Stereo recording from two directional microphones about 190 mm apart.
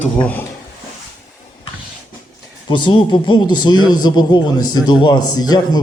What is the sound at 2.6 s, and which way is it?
Speech, 25° left (ahead or behind).